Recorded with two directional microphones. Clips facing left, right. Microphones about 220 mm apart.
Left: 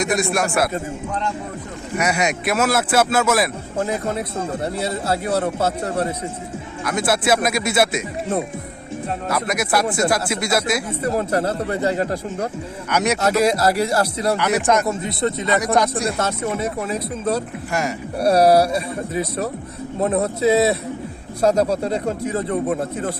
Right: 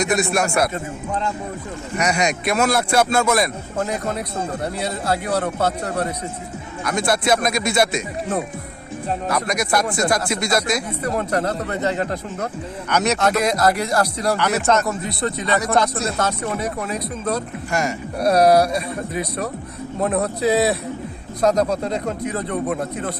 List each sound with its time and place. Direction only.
0.0 s a man's voice: centre (ahead or behind)
2.0 s a man's voice: 5° left (ahead or behind)
3.8 s speech: 30° left (ahead or behind)
6.8 s speech: 5° left (ahead or behind)
9.3 s speech: 5° left (ahead or behind)
11.2 s speech: 30° left (ahead or behind)
12.9 s speech: 10° left (ahead or behind)
14.8 s speech: 25° left (ahead or behind)
16.1 s speech: 25° left (ahead or behind)
17.7 s a man's voice: 5° left (ahead or behind)
18.3 s speech: 30° left (ahead or behind)
21.5 s speech: 10° left (ahead or behind)
21.8 s speech: 30° left (ahead or behind)